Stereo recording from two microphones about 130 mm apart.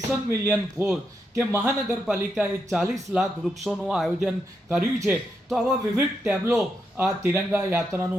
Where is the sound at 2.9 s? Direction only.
Centre (ahead or behind).